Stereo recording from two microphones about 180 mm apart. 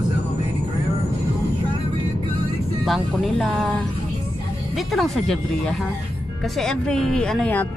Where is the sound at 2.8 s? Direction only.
Centre (ahead or behind).